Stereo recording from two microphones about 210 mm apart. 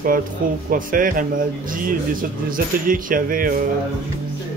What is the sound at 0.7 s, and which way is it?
Speech, 40° right (ahead or behind).